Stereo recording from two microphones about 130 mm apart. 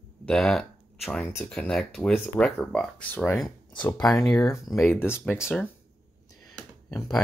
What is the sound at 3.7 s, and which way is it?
Speech, 35° left (ahead or behind).